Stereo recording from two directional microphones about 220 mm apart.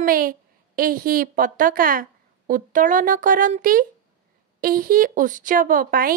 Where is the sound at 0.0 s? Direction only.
40° right (ahead or behind).